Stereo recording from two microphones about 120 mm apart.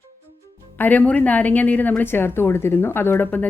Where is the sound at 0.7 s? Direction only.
15° left (ahead or behind).